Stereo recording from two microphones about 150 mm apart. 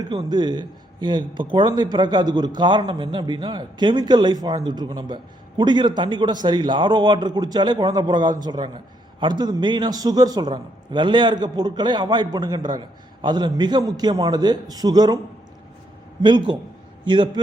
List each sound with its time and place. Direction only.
0.0 s a man's voice: 25° right (ahead or behind)
16.2 s a man's voice: 30° right (ahead or behind)